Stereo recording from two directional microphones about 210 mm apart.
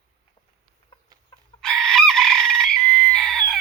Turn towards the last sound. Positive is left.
turn(degrees=5)  # may be behind; listen again after turning